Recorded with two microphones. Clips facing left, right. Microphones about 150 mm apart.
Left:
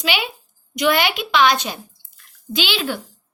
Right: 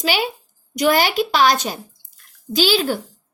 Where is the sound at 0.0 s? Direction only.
40° right (ahead or behind).